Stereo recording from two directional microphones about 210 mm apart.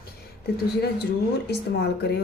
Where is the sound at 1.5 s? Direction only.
50° left (ahead or behind).